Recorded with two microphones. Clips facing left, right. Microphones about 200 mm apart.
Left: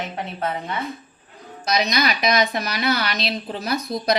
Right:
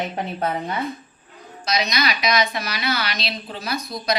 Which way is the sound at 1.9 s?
50° left (ahead or behind).